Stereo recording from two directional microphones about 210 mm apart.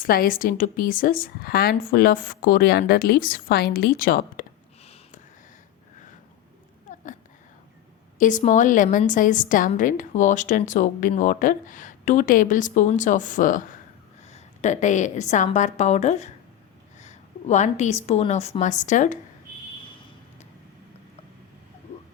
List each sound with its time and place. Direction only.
0.0 s speech: 45° left (ahead or behind)
8.2 s a woman's voice: 35° left (ahead or behind)